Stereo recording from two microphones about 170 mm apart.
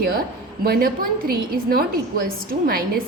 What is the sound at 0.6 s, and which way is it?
A woman's voice, 60° right (ahead or behind).